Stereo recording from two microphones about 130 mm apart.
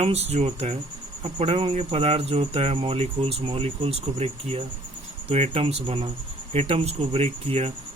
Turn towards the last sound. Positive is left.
turn(degrees=-50)  # may be behind; listen again after turning